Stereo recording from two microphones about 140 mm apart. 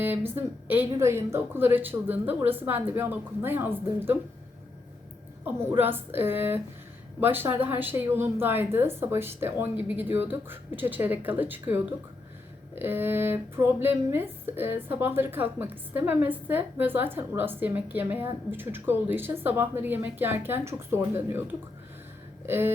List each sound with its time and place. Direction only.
0.0 s speech: 15° right (ahead or behind)
5.7 s speech: 15° right (ahead or behind)